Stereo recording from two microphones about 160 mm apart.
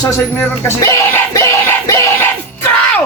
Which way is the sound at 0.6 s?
20° left (ahead or behind).